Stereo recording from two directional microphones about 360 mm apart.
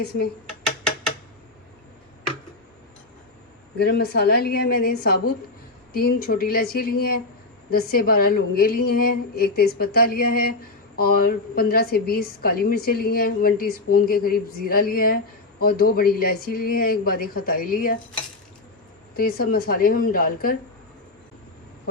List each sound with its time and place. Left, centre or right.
3.8 s a woman's voice: left
19.1 s a woman's voice: left